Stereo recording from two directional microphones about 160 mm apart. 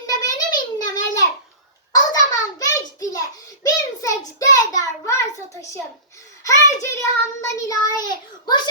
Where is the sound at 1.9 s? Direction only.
25° left (ahead or behind).